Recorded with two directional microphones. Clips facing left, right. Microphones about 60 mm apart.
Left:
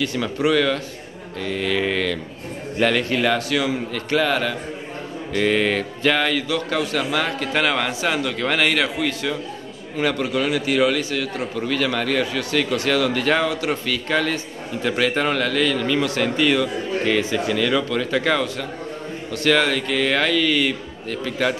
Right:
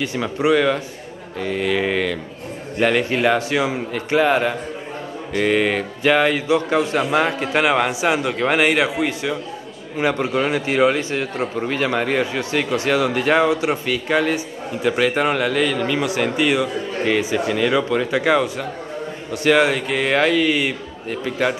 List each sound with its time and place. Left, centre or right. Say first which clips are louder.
0.0 s a man's voice: right 1 dB; right
5.3 s a man's voice: right 1 dB; centre